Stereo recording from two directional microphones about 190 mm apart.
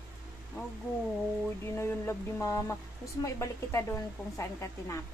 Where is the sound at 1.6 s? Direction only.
10° left (ahead or behind).